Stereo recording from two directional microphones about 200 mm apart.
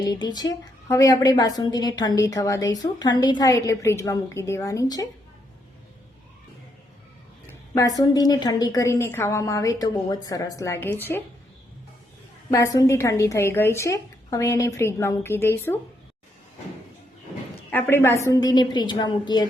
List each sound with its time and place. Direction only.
0.0 s a woman's voice: 20° left (ahead or behind)
7.4 s a woman's voice: 15° left (ahead or behind)
12.5 s a woman's voice: 15° left (ahead or behind)
17.7 s a woman's voice: 10° left (ahead or behind)